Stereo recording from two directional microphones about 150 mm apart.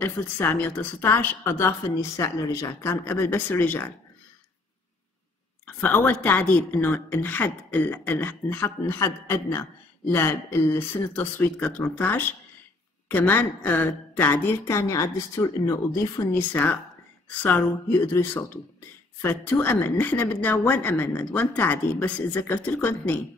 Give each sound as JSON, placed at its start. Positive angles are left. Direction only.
{"t": 0.0, "sound": "a woman's voice", "side_deg": 15}
{"t": 5.8, "sound": "a woman's voice", "side_deg": 10}